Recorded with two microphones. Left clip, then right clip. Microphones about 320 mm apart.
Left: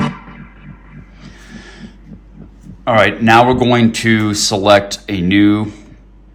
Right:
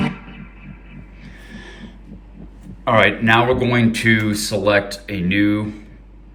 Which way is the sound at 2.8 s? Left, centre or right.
Centre.